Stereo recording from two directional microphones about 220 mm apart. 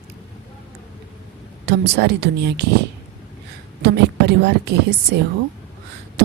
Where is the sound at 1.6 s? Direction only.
50° right (ahead or behind).